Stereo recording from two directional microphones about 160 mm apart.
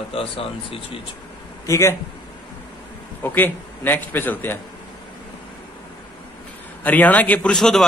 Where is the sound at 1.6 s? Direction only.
15° left (ahead or behind).